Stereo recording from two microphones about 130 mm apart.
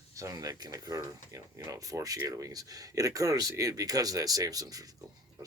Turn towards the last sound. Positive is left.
turn(degrees=-30)  # may be behind; listen again after turning